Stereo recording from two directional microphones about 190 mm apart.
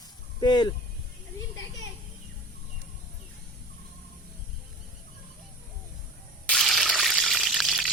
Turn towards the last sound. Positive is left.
turn(degrees=0)  # may be behind; listen again after turning